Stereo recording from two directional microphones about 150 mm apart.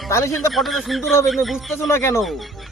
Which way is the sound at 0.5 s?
Centre (ahead or behind).